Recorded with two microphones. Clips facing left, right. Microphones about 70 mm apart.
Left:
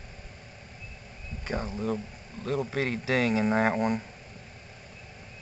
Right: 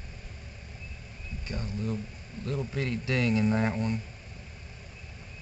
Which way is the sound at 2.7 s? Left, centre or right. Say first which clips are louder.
Left 3 dB; left.